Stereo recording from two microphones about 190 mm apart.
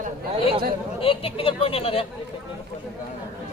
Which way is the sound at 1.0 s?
30° left (ahead or behind).